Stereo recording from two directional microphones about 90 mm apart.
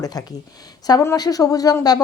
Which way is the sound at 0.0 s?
45° left (ahead or behind).